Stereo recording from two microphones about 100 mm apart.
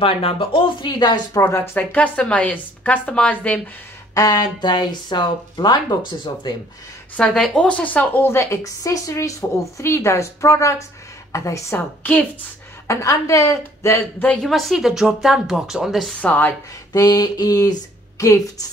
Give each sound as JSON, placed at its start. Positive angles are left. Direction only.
{"t": 0.0, "sound": "speech", "side_deg": 70}
{"t": 1.8, "sound": "a woman's voice", "side_deg": 15}
{"t": 4.1, "sound": "speech", "side_deg": 35}
{"t": 7.2, "sound": "a woman's voice", "side_deg": 5}
{"t": 12.0, "sound": "a woman's voice", "side_deg": 15}
{"t": 12.8, "sound": "a woman's voice", "side_deg": 30}
{"t": 14.2, "sound": "a woman's voice", "side_deg": 10}
{"t": 14.5, "sound": "speech", "side_deg": 0}
{"t": 16.2, "sound": "a woman's voice", "side_deg": 15}
{"t": 16.9, "sound": "speech", "side_deg": 40}